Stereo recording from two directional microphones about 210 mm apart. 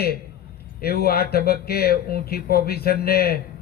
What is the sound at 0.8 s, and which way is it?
Speech, 50° left (ahead or behind).